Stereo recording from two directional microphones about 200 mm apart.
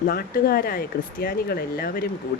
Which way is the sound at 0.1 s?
50° left (ahead or behind).